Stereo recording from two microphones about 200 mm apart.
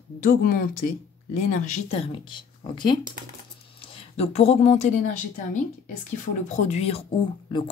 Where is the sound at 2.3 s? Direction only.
25° left (ahead or behind).